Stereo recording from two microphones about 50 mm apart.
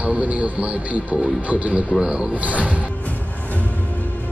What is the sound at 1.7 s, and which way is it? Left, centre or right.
Speech, centre.